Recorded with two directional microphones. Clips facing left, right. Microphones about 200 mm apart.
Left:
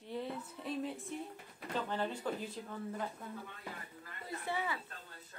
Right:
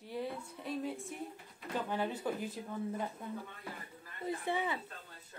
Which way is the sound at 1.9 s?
10° right (ahead or behind).